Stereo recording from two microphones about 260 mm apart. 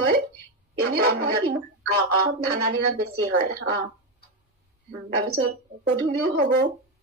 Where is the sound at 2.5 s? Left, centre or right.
Right.